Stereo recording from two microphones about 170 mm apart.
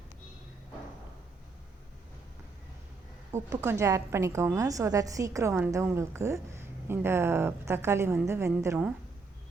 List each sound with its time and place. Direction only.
3.3 s a woman's voice: 15° right (ahead or behind)